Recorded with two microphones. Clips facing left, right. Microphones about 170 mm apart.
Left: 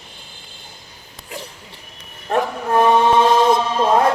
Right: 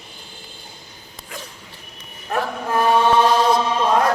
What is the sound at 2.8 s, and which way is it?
Chant, 25° left (ahead or behind).